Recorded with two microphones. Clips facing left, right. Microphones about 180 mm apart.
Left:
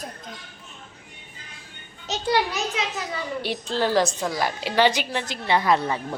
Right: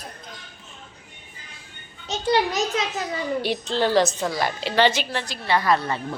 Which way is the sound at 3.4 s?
5° left (ahead or behind).